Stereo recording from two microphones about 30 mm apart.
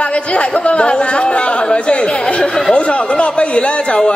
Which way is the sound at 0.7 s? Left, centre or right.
Left.